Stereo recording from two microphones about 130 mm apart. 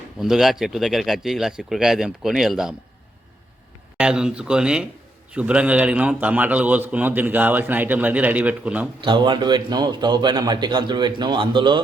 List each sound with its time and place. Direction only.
0.2 s speech: centre (ahead or behind)
3.9 s a man's voice: 5° right (ahead or behind)
9.0 s a man's voice: 35° right (ahead or behind)